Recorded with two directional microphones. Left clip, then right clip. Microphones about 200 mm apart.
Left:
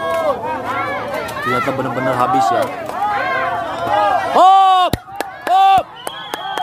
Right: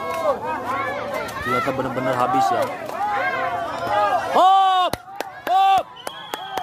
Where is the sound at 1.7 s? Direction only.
Centre (ahead or behind).